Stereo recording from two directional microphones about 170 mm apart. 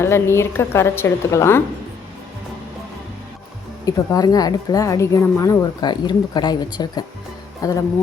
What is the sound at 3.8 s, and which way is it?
Speech, 20° left (ahead or behind).